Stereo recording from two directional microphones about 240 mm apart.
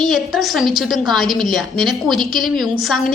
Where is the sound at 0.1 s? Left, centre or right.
Centre.